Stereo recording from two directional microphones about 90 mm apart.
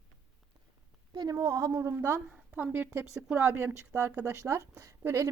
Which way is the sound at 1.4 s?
35° right (ahead or behind).